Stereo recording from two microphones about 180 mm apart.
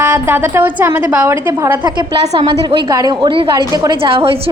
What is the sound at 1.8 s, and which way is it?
A woman's voice, 25° right (ahead or behind).